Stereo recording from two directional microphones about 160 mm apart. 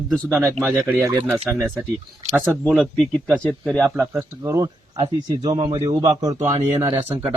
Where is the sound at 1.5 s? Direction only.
Centre (ahead or behind).